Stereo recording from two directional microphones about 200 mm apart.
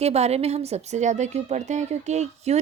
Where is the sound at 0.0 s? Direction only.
30° right (ahead or behind).